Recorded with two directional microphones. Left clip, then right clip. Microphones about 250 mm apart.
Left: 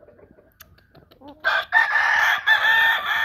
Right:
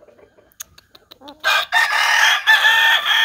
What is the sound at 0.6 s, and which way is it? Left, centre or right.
Chicken, centre.